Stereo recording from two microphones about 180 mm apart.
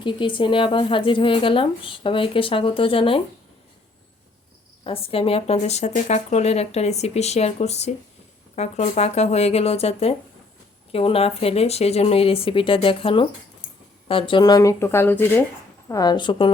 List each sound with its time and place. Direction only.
0.0 s speech: 25° left (ahead or behind)
4.8 s speech: 30° left (ahead or behind); by 15.4 s 10° left (ahead or behind)
15.9 s speech: 20° left (ahead or behind)